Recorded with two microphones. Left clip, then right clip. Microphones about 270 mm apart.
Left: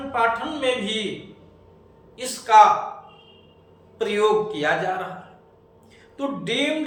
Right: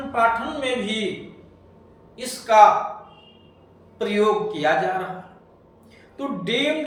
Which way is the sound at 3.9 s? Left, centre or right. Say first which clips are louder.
Even; centre.